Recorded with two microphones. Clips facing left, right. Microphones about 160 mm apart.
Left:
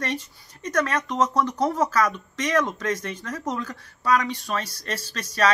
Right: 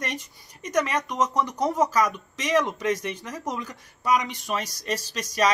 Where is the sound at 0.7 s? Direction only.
15° right (ahead or behind).